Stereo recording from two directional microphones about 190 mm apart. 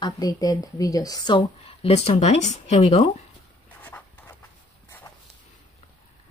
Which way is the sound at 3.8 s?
10° left (ahead or behind).